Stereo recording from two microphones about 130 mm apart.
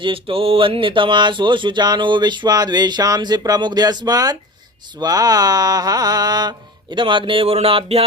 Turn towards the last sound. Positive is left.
turn(degrees=-50)  # may be behind; listen again after turning